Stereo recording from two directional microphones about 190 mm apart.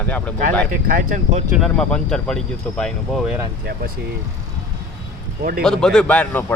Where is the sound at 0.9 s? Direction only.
45° right (ahead or behind).